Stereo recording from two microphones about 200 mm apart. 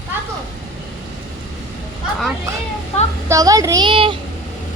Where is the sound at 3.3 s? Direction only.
15° right (ahead or behind).